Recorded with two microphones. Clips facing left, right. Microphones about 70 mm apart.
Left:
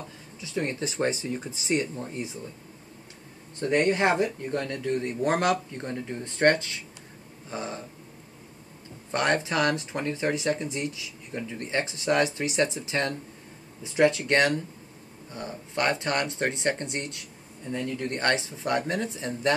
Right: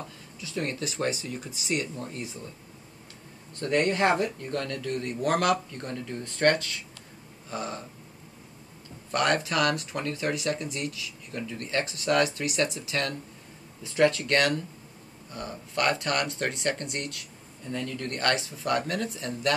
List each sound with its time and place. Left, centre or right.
0.4 s speech: left
3.5 s speech: left
9.1 s speech: left